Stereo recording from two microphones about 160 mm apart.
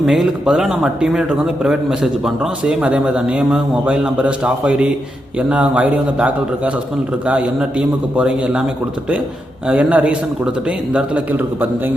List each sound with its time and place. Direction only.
0.0 s a man's voice: 5° right (ahead or behind)
9.6 s a man's voice: 10° right (ahead or behind)